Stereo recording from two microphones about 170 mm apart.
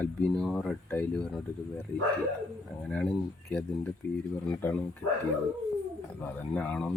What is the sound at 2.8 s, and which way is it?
Speech, 10° left (ahead or behind).